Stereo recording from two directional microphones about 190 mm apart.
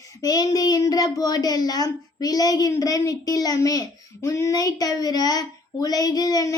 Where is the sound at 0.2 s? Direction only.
20° left (ahead or behind).